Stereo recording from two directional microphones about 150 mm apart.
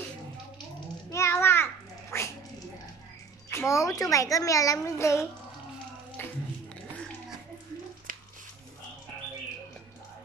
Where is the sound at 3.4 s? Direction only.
20° left (ahead or behind).